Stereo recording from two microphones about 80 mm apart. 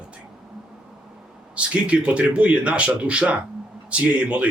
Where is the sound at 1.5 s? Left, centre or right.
Centre.